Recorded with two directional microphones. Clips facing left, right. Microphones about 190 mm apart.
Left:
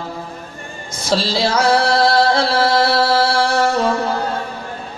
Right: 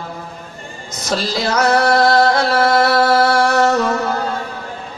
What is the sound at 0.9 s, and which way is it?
Music, 30° left (ahead or behind).